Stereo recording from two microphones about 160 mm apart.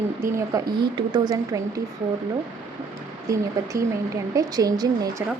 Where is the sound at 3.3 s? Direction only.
20° right (ahead or behind).